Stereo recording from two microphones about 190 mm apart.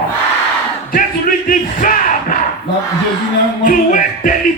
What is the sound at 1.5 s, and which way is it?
Crowd, 45° left (ahead or behind).